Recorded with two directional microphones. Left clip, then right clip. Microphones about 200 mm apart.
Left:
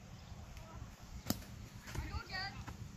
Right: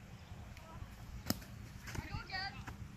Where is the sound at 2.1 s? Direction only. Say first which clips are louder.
Right 1 dB; 40° right (ahead or behind).